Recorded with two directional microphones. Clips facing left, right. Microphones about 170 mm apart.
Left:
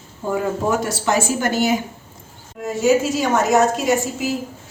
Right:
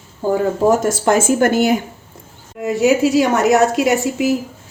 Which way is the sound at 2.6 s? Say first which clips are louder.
Right 3 dB; 65° right (ahead or behind).